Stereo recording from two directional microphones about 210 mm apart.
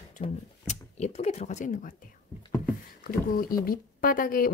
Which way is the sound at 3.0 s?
45° left (ahead or behind).